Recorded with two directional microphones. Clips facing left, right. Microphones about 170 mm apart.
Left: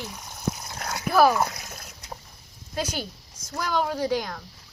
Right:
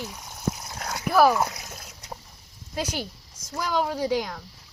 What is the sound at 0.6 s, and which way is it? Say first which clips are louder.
Dog: even; 5° right (ahead or behind).